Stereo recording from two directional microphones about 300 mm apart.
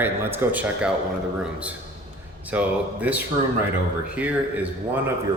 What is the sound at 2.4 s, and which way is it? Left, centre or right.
A man's voice, centre.